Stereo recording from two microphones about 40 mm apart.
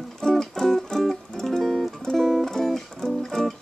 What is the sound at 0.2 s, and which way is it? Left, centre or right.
Music, centre.